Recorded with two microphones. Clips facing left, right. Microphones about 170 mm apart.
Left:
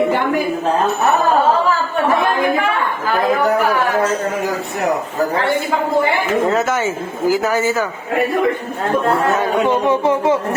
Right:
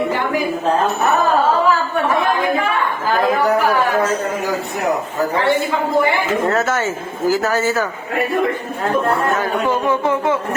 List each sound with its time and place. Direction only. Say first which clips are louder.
6.5 s speech: left 1 dB; 15° left (ahead or behind)
9.4 s speech: left 3 dB; 25° left (ahead or behind)